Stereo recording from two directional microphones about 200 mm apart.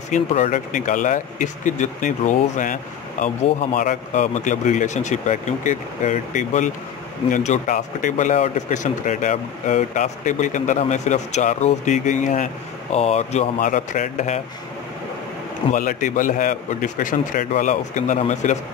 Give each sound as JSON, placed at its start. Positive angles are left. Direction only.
{"t": 0.1, "sound": "speech", "side_deg": 35}
{"t": 15.7, "sound": "speech", "side_deg": 45}